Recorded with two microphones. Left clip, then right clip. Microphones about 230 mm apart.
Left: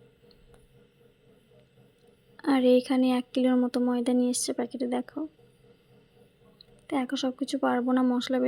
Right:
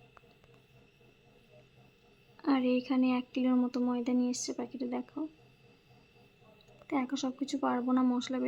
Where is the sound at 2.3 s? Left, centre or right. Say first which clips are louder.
Left 8 dB; centre.